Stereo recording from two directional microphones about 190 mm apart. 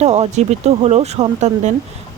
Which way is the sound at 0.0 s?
35° right (ahead or behind).